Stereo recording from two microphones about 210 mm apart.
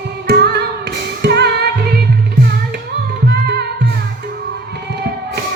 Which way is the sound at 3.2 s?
55° right (ahead or behind).